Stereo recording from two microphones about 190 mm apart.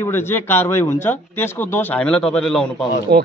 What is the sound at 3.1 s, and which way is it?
Speech, 60° right (ahead or behind).